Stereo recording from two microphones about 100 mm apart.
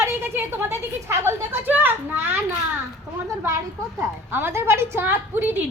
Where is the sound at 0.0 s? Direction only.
20° right (ahead or behind).